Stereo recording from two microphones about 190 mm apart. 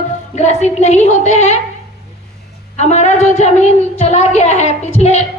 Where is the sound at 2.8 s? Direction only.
35° left (ahead or behind).